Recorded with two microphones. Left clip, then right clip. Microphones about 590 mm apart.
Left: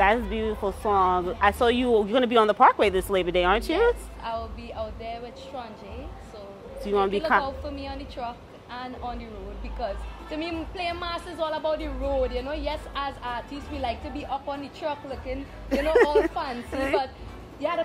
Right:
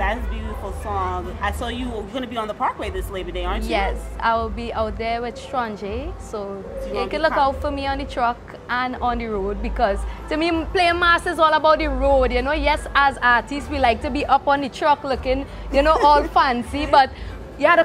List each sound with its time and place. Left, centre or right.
0.0 s a woman's voice: left
3.8 s a woman's voice: right